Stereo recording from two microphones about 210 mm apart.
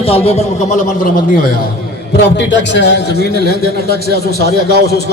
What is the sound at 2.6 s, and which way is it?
A man's voice, 55° left (ahead or behind).